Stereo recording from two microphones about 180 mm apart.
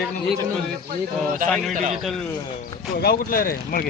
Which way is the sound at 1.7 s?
45° right (ahead or behind).